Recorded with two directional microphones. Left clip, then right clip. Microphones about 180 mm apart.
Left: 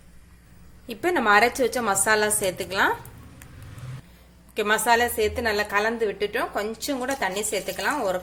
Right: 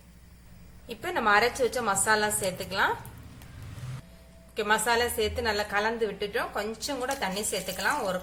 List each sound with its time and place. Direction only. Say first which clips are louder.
0.9 s a woman's voice: left 5 dB; 40° left (ahead or behind)
4.5 s a woman's voice: left 5 dB; 40° left (ahead or behind)